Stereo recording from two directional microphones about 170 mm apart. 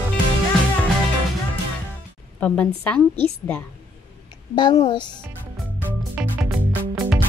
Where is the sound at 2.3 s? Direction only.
10° left (ahead or behind).